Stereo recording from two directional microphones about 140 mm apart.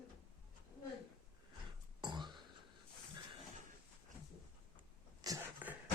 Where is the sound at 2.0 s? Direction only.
35° right (ahead or behind).